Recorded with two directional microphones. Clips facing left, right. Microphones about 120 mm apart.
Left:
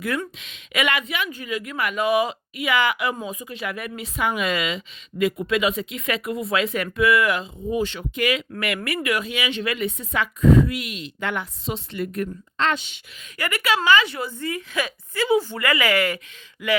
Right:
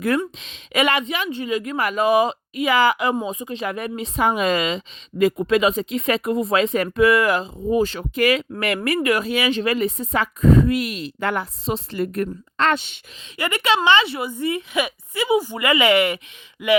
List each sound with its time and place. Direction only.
0.2 s speech: 30° right (ahead or behind)
12.5 s speech: 55° right (ahead or behind)
13.3 s speech: 20° right (ahead or behind)